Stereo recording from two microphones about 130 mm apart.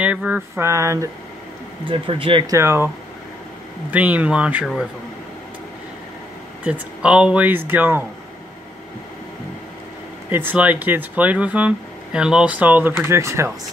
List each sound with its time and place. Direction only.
0.0 s a sound: 10° right (ahead or behind)
1.9 s speech: 40° right (ahead or behind)
2.4 s a sound: 20° right (ahead or behind)
3.9 s speech: 10° right (ahead or behind)
6.6 s speech: 10° right (ahead or behind)
10.3 s speech: 15° right (ahead or behind)